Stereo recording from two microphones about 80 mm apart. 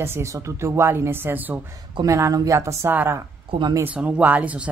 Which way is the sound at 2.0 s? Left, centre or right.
Right.